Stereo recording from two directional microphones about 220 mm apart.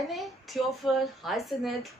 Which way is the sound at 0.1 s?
Centre (ahead or behind).